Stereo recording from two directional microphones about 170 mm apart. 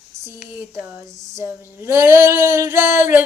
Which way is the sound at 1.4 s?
15° right (ahead or behind).